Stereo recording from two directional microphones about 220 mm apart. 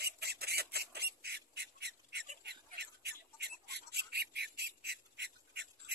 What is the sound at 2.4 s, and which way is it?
Squawk, 50° right (ahead or behind).